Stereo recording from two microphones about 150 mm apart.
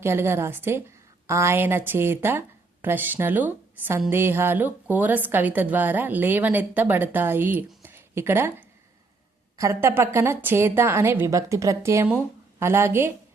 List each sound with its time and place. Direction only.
0.0 s a woman's voice: 15° right (ahead or behind)
7.8 s a sound: 15° right (ahead or behind)
9.6 s a woman's voice: 20° right (ahead or behind)